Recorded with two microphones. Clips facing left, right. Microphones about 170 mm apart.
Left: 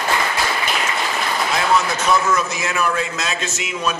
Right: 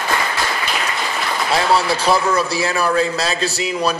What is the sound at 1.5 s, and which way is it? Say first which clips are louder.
A man's voice: right 3 dB; 30° right (ahead or behind).